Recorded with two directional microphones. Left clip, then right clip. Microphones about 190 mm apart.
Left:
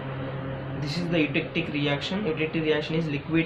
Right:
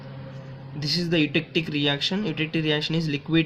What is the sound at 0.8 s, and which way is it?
Speech, 45° right (ahead or behind).